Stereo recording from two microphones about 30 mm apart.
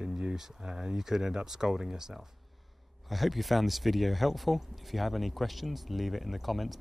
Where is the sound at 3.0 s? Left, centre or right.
Centre.